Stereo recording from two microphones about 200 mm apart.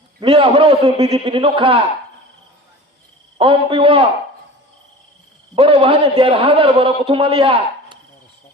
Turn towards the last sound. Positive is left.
turn(degrees=-25)  # may be behind; listen again after turning